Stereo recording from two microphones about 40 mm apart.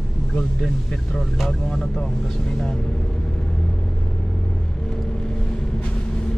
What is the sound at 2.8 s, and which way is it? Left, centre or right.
Vehicle, left.